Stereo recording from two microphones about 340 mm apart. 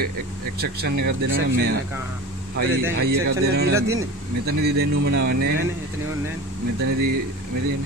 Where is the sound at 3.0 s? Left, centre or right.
Right.